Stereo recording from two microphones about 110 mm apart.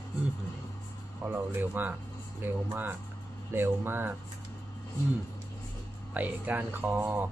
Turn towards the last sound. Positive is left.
turn(degrees=-20)  # may be behind; listen again after turning